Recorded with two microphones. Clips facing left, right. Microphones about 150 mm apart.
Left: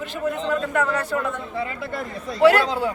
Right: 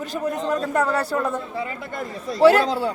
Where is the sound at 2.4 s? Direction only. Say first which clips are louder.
Right 1 dB; 30° right (ahead or behind).